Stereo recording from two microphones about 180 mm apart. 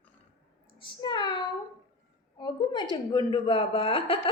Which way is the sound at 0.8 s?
25° left (ahead or behind).